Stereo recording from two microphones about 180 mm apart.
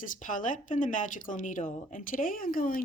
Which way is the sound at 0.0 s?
45° left (ahead or behind).